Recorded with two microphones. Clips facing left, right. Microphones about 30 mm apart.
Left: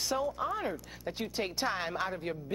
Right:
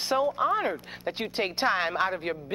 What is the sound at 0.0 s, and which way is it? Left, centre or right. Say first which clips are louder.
Speech: right 7 dB; right.